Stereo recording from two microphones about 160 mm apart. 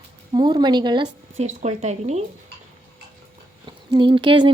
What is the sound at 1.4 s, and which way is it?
Speech, 45° right (ahead or behind).